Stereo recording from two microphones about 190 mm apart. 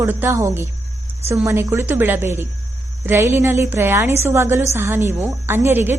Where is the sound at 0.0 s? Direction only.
10° right (ahead or behind).